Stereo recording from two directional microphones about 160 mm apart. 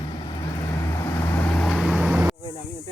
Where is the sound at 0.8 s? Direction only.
15° left (ahead or behind); by 2.2 s 5° right (ahead or behind).